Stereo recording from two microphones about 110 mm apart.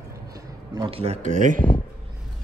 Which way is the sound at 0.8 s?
65° right (ahead or behind).